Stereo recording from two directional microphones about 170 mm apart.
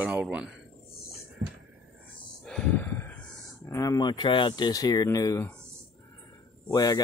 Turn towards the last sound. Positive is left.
turn(degrees=20)  # may be behind; listen again after turning